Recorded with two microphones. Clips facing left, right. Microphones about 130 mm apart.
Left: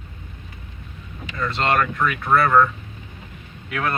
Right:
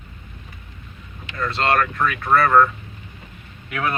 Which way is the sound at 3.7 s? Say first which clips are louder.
Even; 5° right (ahead or behind).